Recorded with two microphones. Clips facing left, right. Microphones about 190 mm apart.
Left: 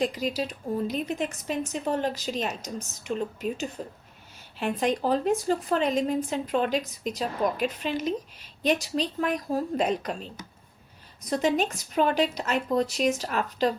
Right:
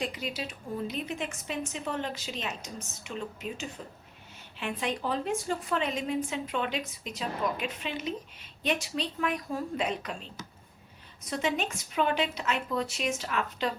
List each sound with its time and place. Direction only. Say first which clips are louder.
0.0 s a woman's voice: left 7 dB; 40° left (ahead or behind)
11.3 s a woman's voice: left 6 dB; 40° left (ahead or behind)